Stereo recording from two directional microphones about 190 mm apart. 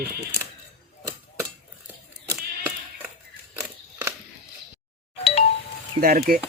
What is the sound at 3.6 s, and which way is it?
Scissors, 10° right (ahead or behind).